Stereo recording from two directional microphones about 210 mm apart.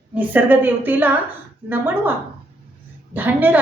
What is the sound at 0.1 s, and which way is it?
A woman's voice, 10° right (ahead or behind).